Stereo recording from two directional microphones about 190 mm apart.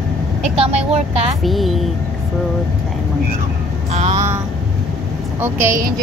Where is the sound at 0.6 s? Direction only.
35° right (ahead or behind).